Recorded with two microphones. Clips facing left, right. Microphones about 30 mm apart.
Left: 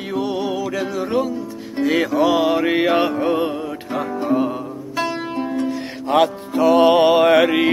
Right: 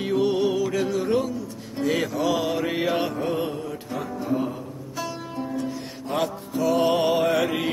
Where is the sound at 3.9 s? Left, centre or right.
Left.